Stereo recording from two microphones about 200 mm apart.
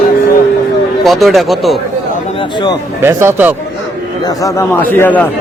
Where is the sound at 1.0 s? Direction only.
Centre (ahead or behind).